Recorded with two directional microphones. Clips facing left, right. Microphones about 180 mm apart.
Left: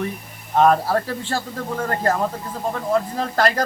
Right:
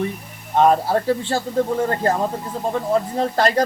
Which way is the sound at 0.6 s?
25° right (ahead or behind).